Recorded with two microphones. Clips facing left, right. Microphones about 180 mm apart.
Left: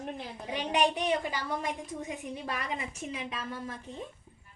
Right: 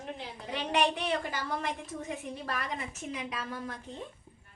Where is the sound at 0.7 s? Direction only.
15° left (ahead or behind).